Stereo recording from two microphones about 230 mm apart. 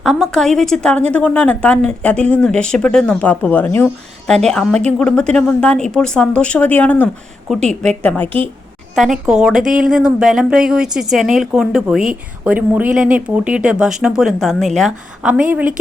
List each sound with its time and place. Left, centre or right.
0.0 s a woman's voice: centre